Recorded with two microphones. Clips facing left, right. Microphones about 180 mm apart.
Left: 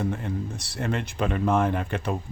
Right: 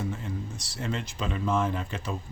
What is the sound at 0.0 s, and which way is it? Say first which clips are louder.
Speech: left 5 dB; 60° left (ahead or behind).